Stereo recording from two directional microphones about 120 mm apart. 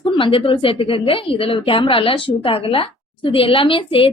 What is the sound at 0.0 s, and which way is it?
A woman's voice, 45° left (ahead or behind).